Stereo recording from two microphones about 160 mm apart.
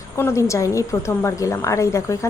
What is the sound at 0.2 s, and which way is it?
A woman's voice, 15° left (ahead or behind).